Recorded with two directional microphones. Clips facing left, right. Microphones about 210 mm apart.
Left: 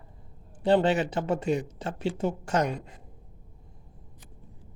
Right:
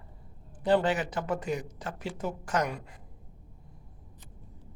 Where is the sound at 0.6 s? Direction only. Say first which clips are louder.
Left 3 dB; 25° left (ahead or behind).